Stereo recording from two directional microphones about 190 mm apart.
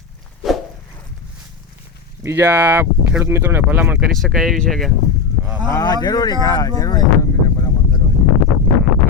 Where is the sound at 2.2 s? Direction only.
15° right (ahead or behind).